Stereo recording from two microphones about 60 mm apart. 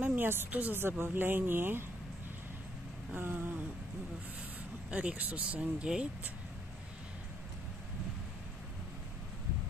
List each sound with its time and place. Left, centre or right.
0.0 s speech: right
0.7 s a woman's voice: right
3.2 s a woman's voice: right
4.9 s speech: right